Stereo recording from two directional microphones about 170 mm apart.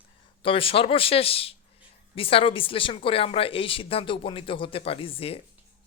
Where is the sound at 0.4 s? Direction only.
30° left (ahead or behind).